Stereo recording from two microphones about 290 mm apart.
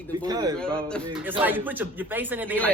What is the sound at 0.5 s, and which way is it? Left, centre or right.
A man's voice, centre.